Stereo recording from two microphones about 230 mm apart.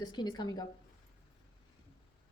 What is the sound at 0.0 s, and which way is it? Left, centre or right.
Speech, centre.